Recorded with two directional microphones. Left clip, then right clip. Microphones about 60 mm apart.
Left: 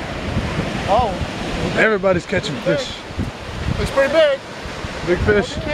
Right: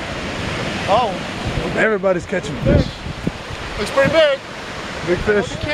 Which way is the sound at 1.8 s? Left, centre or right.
Centre.